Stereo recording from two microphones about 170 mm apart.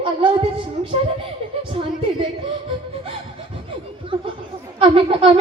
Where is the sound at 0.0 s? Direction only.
30° right (ahead or behind).